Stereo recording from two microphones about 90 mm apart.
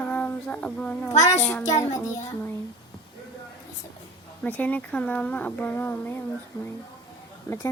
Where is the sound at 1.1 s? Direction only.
40° left (ahead or behind).